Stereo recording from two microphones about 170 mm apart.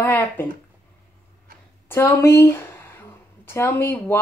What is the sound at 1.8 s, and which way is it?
A woman's voice, 15° left (ahead or behind).